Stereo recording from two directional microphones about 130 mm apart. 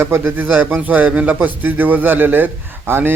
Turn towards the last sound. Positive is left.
turn(degrees=-15)  # may be behind; listen again after turning